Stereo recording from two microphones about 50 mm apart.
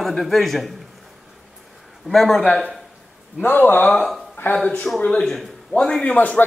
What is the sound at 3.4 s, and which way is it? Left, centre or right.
Speech, left.